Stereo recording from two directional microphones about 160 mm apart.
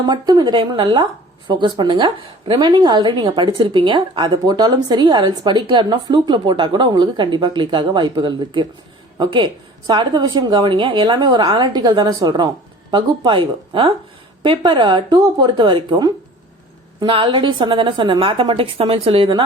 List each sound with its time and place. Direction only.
0.0 s a woman's voice: 25° right (ahead or behind)